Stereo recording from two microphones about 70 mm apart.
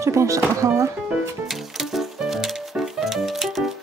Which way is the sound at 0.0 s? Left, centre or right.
Right.